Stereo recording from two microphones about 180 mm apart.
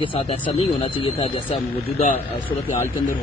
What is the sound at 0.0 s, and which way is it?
Speech, 30° left (ahead or behind).